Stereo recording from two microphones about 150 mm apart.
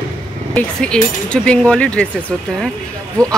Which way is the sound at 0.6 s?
5° left (ahead or behind).